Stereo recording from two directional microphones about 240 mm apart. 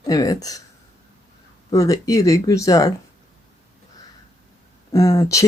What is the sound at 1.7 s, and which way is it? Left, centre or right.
Speech, centre.